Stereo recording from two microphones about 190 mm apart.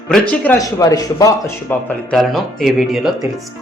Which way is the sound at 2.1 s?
Centre (ahead or behind).